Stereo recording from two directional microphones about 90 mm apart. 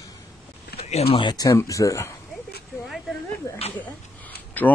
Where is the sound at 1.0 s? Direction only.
90° left.